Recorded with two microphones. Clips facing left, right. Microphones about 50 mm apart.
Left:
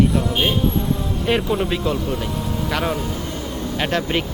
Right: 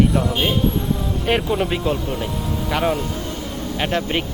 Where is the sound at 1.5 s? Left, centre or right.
Centre.